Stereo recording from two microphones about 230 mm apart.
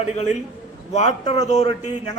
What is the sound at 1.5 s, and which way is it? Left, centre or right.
Speech, left.